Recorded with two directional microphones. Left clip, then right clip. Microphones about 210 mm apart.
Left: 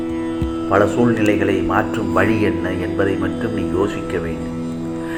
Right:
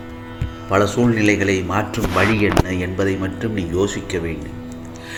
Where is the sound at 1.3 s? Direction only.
50° right (ahead or behind).